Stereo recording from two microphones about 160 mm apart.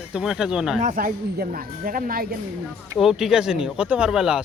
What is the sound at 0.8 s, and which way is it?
Speech, 55° right (ahead or behind).